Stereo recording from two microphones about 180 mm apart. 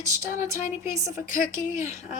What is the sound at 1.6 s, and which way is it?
Speech, 45° left (ahead or behind).